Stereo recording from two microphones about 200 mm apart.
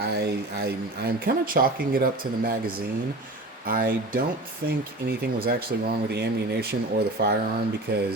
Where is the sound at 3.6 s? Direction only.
45° right (ahead or behind).